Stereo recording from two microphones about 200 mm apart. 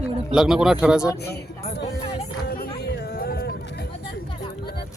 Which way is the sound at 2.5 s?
50° left (ahead or behind).